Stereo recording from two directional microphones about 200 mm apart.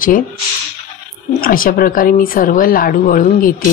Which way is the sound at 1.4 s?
45° left (ahead or behind).